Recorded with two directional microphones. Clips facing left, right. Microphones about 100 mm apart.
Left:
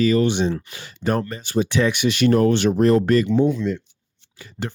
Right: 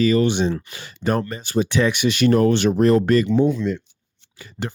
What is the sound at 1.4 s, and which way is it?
Speech, 55° right (ahead or behind).